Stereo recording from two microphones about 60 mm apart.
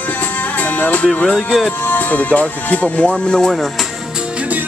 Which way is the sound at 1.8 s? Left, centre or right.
Left.